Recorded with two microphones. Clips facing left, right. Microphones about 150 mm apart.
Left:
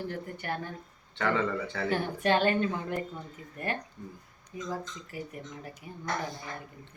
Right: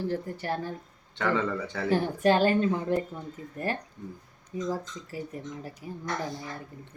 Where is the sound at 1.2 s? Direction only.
10° right (ahead or behind).